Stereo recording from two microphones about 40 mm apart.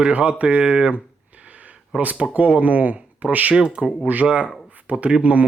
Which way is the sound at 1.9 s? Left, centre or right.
Centre.